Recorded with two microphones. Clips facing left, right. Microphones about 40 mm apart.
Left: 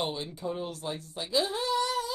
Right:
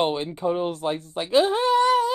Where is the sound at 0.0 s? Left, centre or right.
Right.